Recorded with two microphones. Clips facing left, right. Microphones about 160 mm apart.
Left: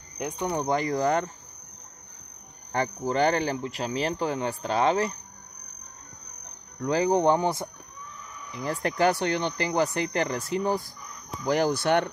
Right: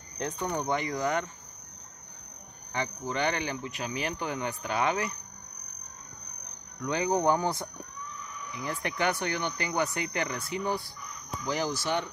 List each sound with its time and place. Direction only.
0.2 s speech: 15° left (ahead or behind)
0.6 s speech: 35° left (ahead or behind)
2.7 s speech: 40° left (ahead or behind)
6.8 s speech: 35° left (ahead or behind)
8.5 s speech: 35° left (ahead or behind)
11.4 s speech: 55° left (ahead or behind)